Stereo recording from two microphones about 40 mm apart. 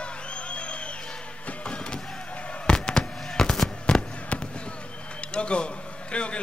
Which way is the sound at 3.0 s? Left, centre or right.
Centre.